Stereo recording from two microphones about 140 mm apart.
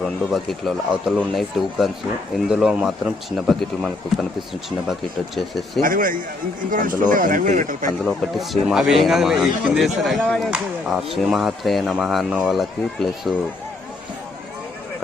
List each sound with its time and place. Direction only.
0.0 s speech: centre (ahead or behind)
5.8 s speech: 80° right
8.0 s speech: centre (ahead or behind)